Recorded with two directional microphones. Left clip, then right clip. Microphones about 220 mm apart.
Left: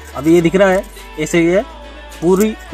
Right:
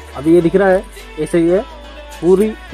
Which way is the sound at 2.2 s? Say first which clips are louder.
Right 2 dB; 20° left (ahead or behind).